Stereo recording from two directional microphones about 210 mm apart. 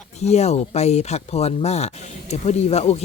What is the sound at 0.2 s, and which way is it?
Speech, 30° left (ahead or behind).